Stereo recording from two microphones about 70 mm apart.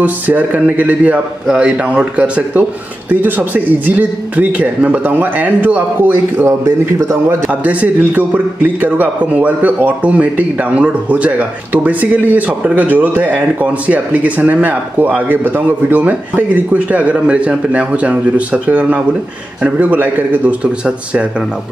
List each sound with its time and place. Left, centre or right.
0.0 s a man's voice: right
7.4 s speech: right